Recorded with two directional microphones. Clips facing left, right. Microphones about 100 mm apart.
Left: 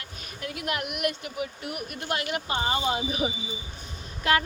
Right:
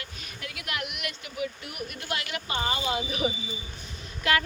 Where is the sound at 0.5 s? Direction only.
40° left (ahead or behind).